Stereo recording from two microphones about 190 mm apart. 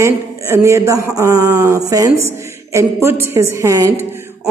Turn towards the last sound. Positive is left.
turn(degrees=-15)  # may be behind; listen again after turning